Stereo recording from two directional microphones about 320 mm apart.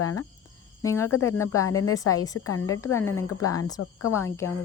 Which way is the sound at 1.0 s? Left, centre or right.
Left.